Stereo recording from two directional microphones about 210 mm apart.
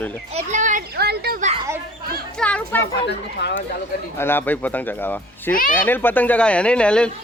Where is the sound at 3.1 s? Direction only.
55° left (ahead or behind).